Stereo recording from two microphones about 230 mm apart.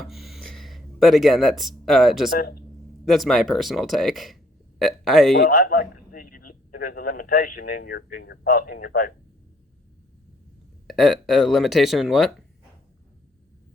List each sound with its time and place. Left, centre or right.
0.0 s speech: centre
2.4 s speech: left
3.1 s speech: centre
5.4 s a man's voice: left
10.8 s speech: centre